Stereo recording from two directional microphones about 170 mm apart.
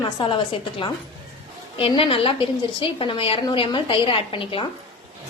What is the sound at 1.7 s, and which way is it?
A woman's voice, 30° left (ahead or behind).